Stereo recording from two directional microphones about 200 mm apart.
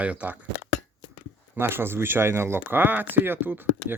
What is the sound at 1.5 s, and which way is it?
Speech, 10° right (ahead or behind).